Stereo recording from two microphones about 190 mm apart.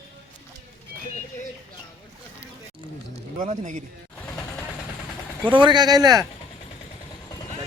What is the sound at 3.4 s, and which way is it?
Speech, 40° right (ahead or behind).